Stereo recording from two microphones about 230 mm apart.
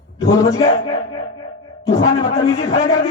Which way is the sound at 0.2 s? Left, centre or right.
Centre.